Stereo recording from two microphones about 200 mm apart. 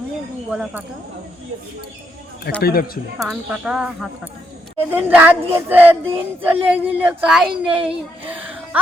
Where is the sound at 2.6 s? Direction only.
50° left (ahead or behind).